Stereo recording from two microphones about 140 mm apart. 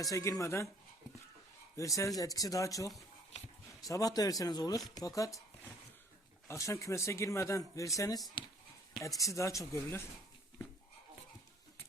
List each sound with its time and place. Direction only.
0.0 s speech: 25° left (ahead or behind)
1.7 s speech: 25° left (ahead or behind)
6.5 s speech: 20° left (ahead or behind)